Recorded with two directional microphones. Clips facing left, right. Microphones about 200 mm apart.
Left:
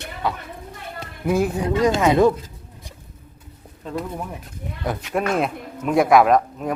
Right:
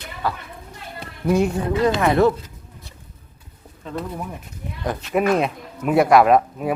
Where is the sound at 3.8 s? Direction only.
Centre (ahead or behind).